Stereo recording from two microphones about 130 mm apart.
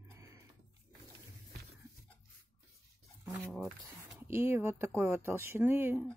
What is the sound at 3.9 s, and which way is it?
Speech, 20° right (ahead or behind).